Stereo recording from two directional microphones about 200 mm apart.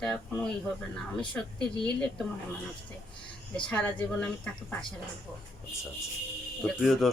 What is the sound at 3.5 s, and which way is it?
Speech, 5° left (ahead or behind).